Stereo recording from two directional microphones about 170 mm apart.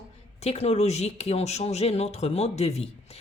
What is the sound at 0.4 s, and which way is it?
A woman's voice, 40° left (ahead or behind).